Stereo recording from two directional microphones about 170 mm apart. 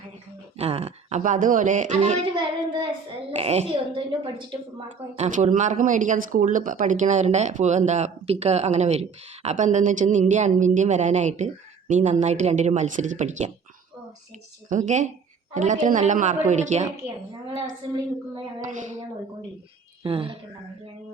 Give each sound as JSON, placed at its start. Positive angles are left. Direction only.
{"t": 0.6, "sound": "speech", "side_deg": -35}
{"t": 2.3, "sound": "child singing", "side_deg": -25}
{"t": 3.3, "sound": "a woman's voice", "side_deg": -40}
{"t": 5.1, "sound": "speech", "side_deg": -40}
{"t": 14.7, "sound": "speech", "side_deg": -45}
{"t": 18.6, "sound": "speech", "side_deg": -50}
{"t": 20.0, "sound": "a woman's voice", "side_deg": -35}